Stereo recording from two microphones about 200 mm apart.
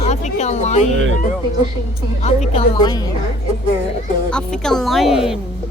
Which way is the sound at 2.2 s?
35° left (ahead or behind).